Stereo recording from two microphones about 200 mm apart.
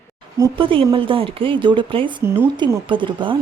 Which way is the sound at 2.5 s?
25° right (ahead or behind).